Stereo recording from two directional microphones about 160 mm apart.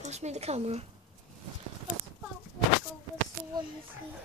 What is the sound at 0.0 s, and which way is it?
Speech, 45° right (ahead or behind).